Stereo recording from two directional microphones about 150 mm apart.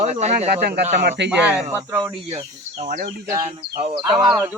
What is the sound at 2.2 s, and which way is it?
Speech, 40° right (ahead or behind).